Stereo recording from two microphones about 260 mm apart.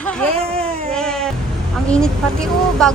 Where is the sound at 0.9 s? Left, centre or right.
Centre.